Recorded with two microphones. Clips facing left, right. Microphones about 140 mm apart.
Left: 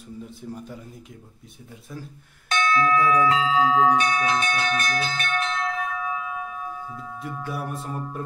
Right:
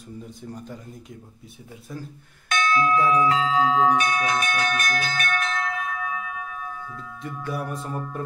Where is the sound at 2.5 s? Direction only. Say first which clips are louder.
Even; 30° left (ahead or behind).